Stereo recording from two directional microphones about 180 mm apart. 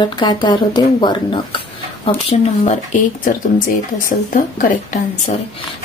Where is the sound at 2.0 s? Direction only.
35° left (ahead or behind).